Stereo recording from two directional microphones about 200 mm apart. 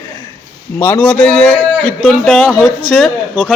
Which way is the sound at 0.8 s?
5° left (ahead or behind).